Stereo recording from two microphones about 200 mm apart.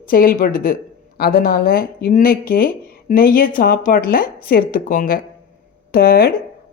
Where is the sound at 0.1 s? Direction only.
45° left (ahead or behind).